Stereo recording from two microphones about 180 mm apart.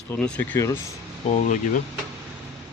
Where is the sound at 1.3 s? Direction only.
45° left (ahead or behind).